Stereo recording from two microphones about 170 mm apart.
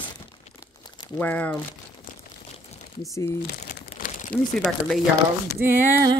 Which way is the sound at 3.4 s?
50° left (ahead or behind).